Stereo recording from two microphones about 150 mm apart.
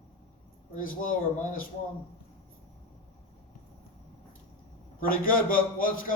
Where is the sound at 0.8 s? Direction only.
65° left (ahead or behind).